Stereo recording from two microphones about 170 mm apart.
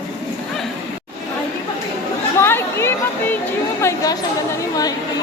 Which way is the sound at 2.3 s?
15° left (ahead or behind).